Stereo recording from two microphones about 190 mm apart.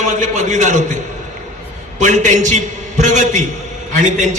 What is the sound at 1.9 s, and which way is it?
A man's voice, 40° right (ahead or behind).